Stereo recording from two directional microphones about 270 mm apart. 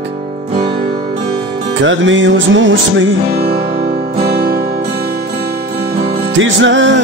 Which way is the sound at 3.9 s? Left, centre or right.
Right.